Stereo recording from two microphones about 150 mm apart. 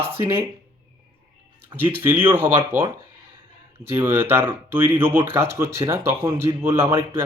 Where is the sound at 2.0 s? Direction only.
15° right (ahead or behind).